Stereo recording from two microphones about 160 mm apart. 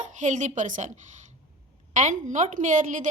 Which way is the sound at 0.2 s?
50° right (ahead or behind).